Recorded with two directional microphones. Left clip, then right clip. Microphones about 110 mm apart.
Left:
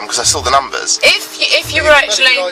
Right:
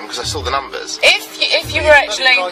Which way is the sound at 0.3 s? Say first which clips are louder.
Left 7 dB; 50° left (ahead or behind).